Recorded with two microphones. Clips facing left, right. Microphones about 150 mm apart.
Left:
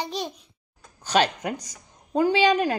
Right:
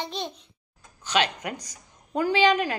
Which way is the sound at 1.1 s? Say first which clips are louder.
Left 3 dB; 40° left (ahead or behind).